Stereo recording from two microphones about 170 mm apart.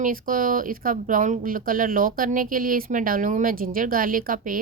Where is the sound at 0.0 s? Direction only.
55° right (ahead or behind).